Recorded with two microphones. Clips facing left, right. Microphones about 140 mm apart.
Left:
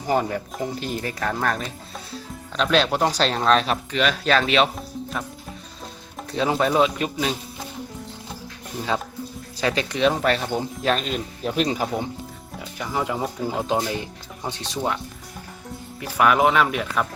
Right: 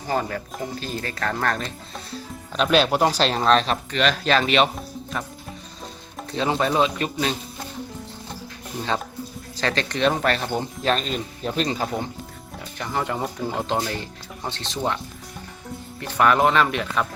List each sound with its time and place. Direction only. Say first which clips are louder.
0.1 s speech: left 3 dB; 15° left (ahead or behind)
2.6 s speech: right 1 dB; 10° right (ahead or behind)
6.3 s speech: left 1 dB; 5° left (ahead or behind)
9.6 s speech: left 1 dB; 10° left (ahead or behind)
16.0 s speech: even; 5° left (ahead or behind)